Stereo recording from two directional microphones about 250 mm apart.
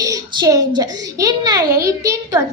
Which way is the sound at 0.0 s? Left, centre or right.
Centre.